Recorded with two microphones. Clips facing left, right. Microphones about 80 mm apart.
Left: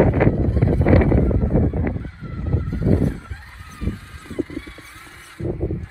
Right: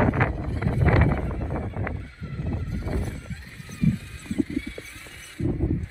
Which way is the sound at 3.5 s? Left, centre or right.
Left.